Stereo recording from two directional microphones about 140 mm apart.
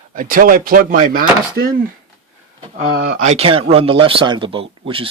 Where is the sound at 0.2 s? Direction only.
85° right.